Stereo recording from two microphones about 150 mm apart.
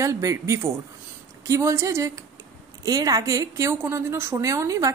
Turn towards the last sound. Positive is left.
turn(degrees=-20)  # may be behind; listen again after turning